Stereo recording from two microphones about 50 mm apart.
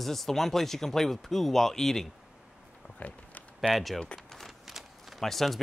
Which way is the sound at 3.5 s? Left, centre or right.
Centre.